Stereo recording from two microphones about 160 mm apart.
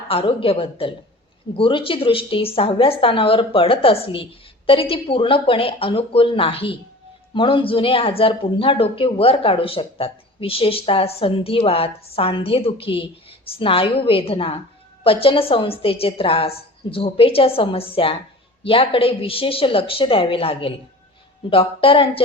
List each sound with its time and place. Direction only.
0.1 s speech: 35° left (ahead or behind)